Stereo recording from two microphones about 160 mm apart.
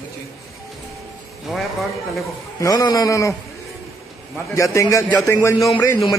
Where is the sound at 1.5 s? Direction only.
Centre (ahead or behind).